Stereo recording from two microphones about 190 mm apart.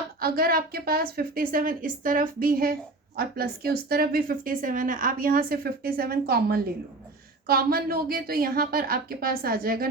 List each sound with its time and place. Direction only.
0.2 s a woman's voice: 50° right (ahead or behind)